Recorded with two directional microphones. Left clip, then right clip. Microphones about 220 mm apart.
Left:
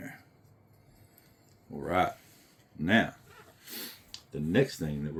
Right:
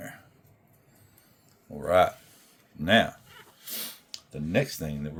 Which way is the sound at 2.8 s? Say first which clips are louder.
Right 5 dB; 60° right (ahead or behind).